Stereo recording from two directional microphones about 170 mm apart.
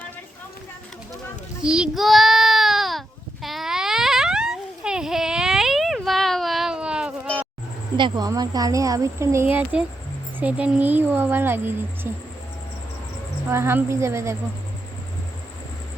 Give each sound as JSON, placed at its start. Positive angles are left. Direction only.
{"t": 1.6, "sound": "child singing", "side_deg": -5}
{"t": 3.4, "sound": "a sound", "side_deg": 0}
{"t": 7.9, "sound": "speech", "side_deg": -25}
{"t": 13.5, "sound": "speech", "side_deg": -15}